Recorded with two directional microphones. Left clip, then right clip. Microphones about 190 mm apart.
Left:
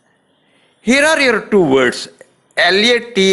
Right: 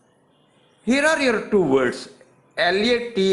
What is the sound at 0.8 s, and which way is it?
A man's voice, 25° left (ahead or behind).